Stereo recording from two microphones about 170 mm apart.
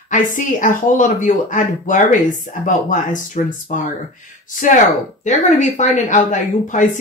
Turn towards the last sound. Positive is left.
turn(degrees=45)  # may be behind; listen again after turning